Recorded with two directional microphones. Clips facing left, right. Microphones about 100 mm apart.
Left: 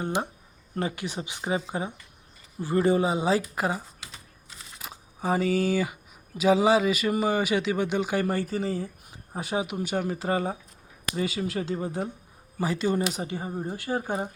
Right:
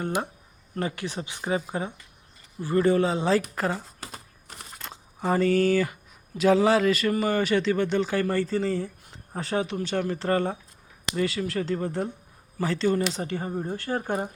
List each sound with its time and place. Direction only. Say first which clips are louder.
0.8 s speech: even; 20° left (ahead or behind)
4.0 s typing: right 5 dB; 55° right (ahead or behind)
4.8 s speech: right 1 dB; 5° left (ahead or behind)